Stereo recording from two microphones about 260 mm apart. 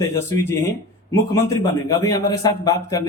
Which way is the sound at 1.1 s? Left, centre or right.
Centre.